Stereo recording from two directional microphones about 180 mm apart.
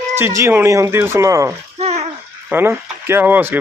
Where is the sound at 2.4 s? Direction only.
10° right (ahead or behind).